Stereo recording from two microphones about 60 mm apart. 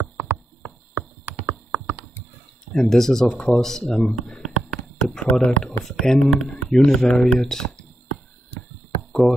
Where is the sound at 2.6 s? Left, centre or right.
Centre.